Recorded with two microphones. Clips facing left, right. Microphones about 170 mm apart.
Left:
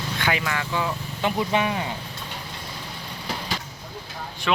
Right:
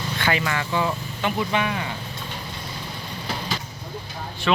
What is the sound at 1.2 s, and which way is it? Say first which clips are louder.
Speech: left 1 dB; 30° left (ahead or behind).